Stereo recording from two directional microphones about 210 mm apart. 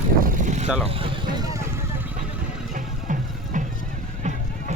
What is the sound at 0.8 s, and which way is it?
Vehicle, 20° right (ahead or behind).